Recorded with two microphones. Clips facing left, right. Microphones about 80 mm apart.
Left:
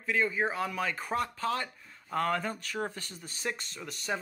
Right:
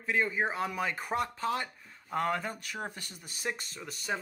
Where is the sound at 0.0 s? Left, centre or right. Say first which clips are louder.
Left 1 dB; right.